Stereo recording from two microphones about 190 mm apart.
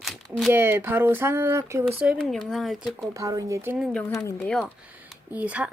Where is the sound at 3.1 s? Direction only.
15° right (ahead or behind).